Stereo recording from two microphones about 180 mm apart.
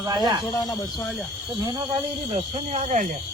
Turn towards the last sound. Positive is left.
turn(degrees=-40)  # may be behind; listen again after turning